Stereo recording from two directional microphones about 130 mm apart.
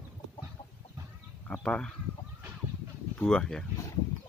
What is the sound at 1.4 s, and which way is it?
Speech, 5° left (ahead or behind).